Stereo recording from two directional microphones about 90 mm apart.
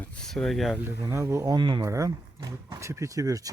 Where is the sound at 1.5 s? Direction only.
50° right (ahead or behind).